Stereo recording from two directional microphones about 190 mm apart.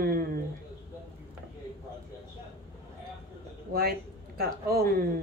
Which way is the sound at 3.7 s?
55° right (ahead or behind).